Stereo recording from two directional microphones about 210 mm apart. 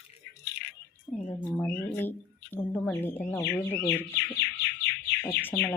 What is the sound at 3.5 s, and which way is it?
Speech, 10° left (ahead or behind).